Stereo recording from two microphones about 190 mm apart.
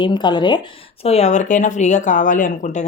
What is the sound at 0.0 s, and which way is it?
Speech, 25° left (ahead or behind).